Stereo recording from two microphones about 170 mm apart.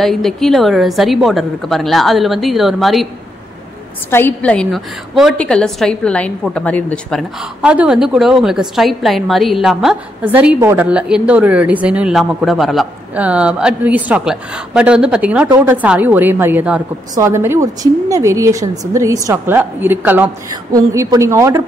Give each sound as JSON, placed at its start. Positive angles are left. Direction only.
{"t": 0.0, "sound": "a woman's voice", "side_deg": 0}
{"t": 4.1, "sound": "a woman's voice", "side_deg": 10}
{"t": 7.6, "sound": "a woman's voice", "side_deg": -5}